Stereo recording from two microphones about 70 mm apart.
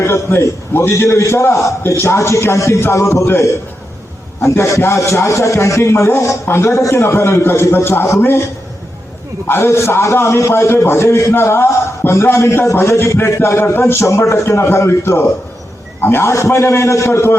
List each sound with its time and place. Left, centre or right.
0.0 s a man's voice: left
9.5 s a man's voice: left
14.0 s a man's voice: left